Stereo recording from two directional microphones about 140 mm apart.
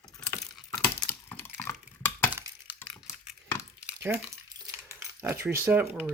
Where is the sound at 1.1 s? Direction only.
15° left (ahead or behind).